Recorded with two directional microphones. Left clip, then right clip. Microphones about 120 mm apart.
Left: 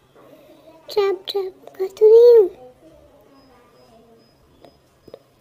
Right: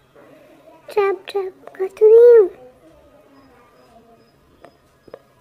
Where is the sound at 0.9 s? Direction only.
40° left (ahead or behind).